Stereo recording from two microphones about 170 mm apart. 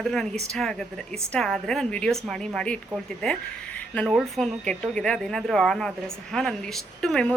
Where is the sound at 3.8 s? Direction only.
10° left (ahead or behind).